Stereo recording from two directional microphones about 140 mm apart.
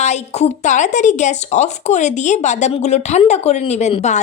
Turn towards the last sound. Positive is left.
turn(degrees=55)  # may be behind; listen again after turning